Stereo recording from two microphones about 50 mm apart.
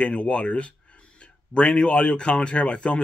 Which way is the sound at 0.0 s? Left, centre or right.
Left.